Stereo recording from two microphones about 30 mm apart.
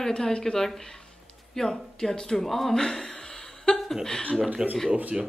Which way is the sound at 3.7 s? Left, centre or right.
Left.